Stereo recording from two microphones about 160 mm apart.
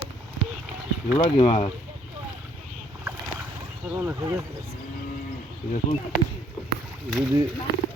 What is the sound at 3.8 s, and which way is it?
Speech, 15° right (ahead or behind).